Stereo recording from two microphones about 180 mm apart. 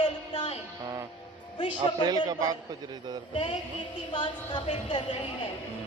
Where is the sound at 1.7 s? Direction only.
25° right (ahead or behind).